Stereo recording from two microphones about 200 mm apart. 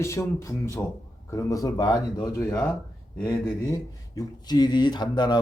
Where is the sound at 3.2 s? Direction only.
5° left (ahead or behind).